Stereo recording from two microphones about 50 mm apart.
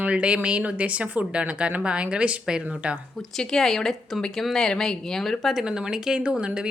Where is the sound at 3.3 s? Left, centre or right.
Centre.